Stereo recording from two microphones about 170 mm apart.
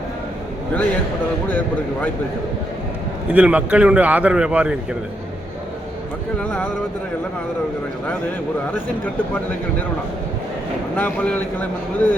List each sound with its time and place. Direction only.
1.5 s speech: 10° left (ahead or behind)
3.3 s speech: 10° right (ahead or behind)
6.4 s speech: 10° left (ahead or behind)
10.9 s speech: 10° left (ahead or behind)